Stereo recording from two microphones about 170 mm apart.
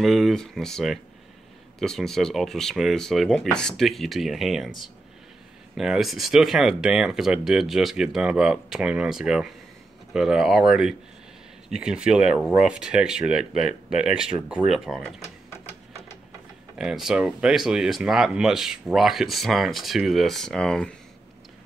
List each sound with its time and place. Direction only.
0.0 s speech: centre (ahead or behind)
15.2 s printer: 40° left (ahead or behind)
16.7 s speech: 5° right (ahead or behind)